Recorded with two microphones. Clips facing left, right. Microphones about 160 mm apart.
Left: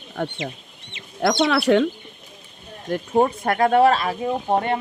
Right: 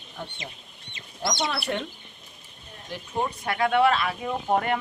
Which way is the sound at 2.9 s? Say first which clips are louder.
Left 10 dB; 55° left (ahead or behind).